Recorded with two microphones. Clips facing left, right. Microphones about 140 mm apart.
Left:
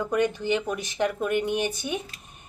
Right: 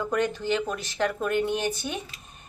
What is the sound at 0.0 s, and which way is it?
A woman's voice, 15° left (ahead or behind).